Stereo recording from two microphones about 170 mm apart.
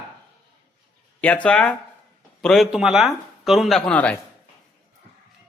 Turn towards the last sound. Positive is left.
turn(degrees=5)  # may be behind; listen again after turning